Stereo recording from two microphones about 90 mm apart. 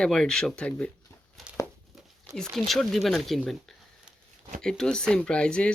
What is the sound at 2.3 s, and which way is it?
Speech, 5° left (ahead or behind).